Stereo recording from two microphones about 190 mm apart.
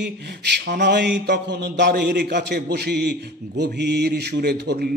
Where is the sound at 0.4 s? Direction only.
65° right (ahead or behind).